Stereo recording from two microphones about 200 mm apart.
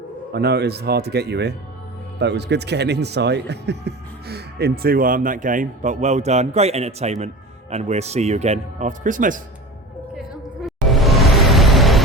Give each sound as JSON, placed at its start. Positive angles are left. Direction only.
{"t": 0.3, "sound": "a man's voice", "side_deg": -55}
{"t": 10.6, "sound": "music", "side_deg": 0}